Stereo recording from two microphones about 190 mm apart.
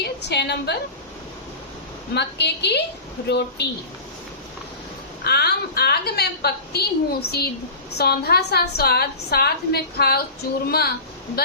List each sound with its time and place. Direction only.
0.0 s a woman's voice: 60° left (ahead or behind)
2.1 s a woman's voice: 60° left (ahead or behind)
5.2 s a woman's voice: 55° left (ahead or behind)